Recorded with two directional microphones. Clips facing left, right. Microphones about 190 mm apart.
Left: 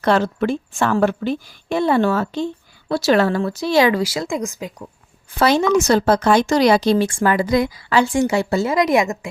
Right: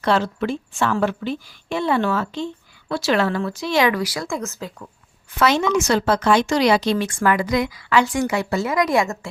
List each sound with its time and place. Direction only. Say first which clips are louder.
0.0 s a woman's voice: left 3 dB; 50° left (ahead or behind); by 4.7 s 15° left (ahead or behind)
5.3 s a woman's voice: left 3 dB; 35° left (ahead or behind)